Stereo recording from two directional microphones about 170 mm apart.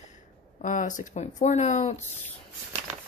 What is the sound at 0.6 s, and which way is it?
Speech, 45° left (ahead or behind).